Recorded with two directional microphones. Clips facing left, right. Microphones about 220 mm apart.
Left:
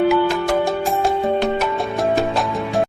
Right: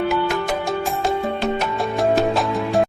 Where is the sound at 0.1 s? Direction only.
Centre (ahead or behind).